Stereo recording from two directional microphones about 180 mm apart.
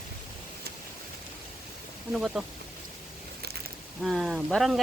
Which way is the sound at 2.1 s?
Centre (ahead or behind).